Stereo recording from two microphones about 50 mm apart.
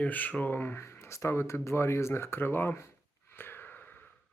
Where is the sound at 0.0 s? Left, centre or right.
Left.